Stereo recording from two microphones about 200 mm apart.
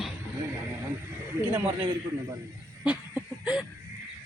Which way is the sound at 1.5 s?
10° right (ahead or behind).